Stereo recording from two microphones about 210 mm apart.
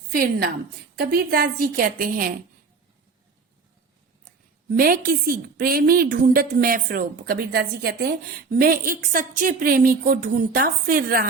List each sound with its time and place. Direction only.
0.1 s a woman's voice: 45° right (ahead or behind)
4.8 s a woman's voice: 45° right (ahead or behind)